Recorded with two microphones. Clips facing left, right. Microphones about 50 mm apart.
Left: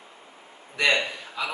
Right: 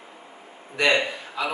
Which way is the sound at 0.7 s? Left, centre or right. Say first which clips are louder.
Right 2 dB; centre.